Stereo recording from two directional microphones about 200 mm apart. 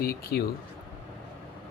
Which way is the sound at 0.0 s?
50° left (ahead or behind).